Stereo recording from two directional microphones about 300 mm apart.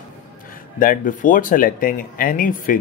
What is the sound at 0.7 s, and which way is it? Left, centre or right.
Speech, left.